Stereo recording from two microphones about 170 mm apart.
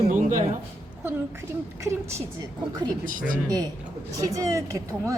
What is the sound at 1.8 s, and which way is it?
Speech, 15° right (ahead or behind).